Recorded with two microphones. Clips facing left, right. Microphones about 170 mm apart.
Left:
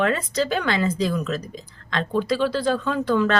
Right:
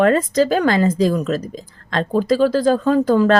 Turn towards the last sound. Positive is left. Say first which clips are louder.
# right 7 dB
turn(degrees=-40)  # may be behind; listen again after turning